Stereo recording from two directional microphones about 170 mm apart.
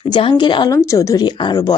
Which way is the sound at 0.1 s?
30° left (ahead or behind).